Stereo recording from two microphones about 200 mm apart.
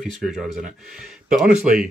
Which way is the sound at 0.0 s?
Centre (ahead or behind).